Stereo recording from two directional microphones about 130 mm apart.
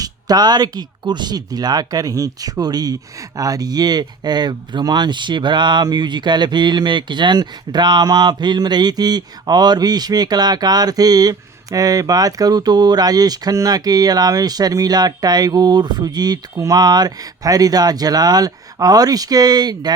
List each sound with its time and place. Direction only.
0.0 s speech: 30° right (ahead or behind)